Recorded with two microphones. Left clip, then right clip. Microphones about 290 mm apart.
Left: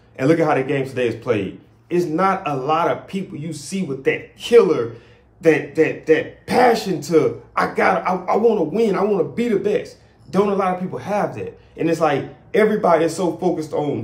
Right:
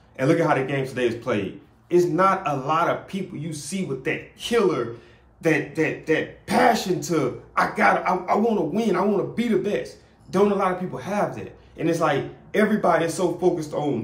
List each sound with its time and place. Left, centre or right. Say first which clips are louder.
0.2 s speech: left 4 dB; centre